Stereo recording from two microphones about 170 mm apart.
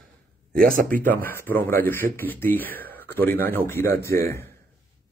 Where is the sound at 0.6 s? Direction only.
55° right (ahead or behind).